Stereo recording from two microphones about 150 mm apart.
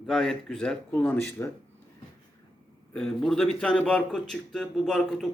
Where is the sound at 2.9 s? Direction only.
5° left (ahead or behind).